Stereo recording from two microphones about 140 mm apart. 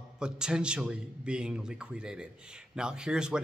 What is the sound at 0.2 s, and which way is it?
A man's voice, 5° right (ahead or behind).